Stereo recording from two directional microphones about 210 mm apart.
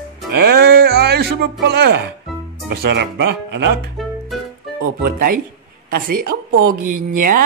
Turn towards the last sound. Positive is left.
turn(degrees=-40)  # may be behind; listen again after turning